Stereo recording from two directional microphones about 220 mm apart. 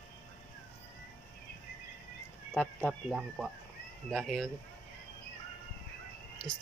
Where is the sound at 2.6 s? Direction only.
5° left (ahead or behind).